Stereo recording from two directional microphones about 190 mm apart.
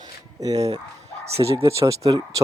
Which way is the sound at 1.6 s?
15° right (ahead or behind).